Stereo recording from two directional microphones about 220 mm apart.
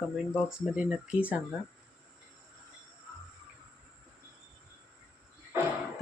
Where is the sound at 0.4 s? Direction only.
5° right (ahead or behind).